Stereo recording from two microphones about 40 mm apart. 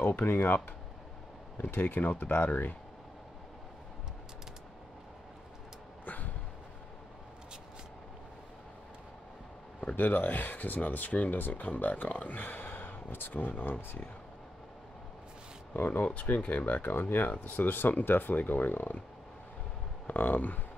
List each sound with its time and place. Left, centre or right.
0.0 s speech: left
1.7 s speech: left
6.0 s a sound: left
9.8 s speech: left
11.6 s speech: left
15.7 s speech: left
20.1 s speech: left